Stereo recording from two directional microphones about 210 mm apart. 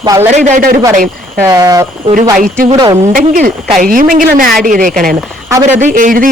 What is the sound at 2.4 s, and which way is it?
Speech, 40° right (ahead or behind).